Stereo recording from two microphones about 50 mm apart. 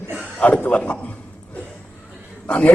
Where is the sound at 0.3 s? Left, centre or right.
Left.